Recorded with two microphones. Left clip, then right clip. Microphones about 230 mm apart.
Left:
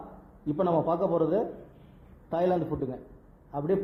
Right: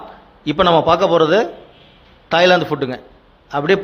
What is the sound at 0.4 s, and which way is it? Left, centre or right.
A man's voice, right.